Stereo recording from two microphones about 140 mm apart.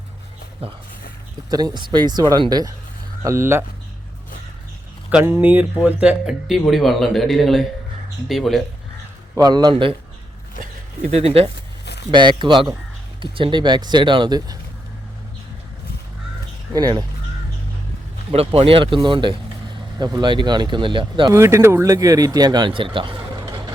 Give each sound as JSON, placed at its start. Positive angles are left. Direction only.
{"t": 0.6, "sound": "speech", "side_deg": -45}
{"t": 1.5, "sound": "speech", "side_deg": -30}
{"t": 3.2, "sound": "speech", "side_deg": -20}
{"t": 5.2, "sound": "speech", "side_deg": -15}
{"t": 9.4, "sound": "speech", "side_deg": -30}
{"t": 11.1, "sound": "speech", "side_deg": -45}
{"t": 12.1, "sound": "speech", "side_deg": -35}
{"t": 16.7, "sound": "speech", "side_deg": -30}
{"t": 18.3, "sound": "speech", "side_deg": -45}
{"t": 21.3, "sound": "speech", "side_deg": -20}